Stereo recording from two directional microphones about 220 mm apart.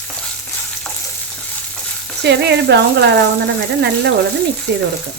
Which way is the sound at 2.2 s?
50° right (ahead or behind).